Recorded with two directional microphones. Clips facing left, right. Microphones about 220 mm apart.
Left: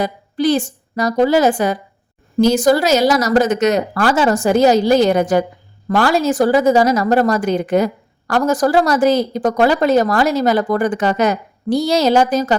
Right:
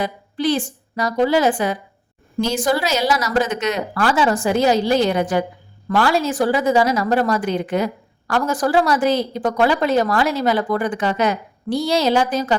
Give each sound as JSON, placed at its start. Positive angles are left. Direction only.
{"t": 0.0, "sound": "a woman's voice", "side_deg": 40}